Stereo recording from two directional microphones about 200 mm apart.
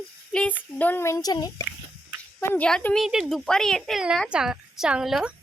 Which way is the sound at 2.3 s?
10° left (ahead or behind).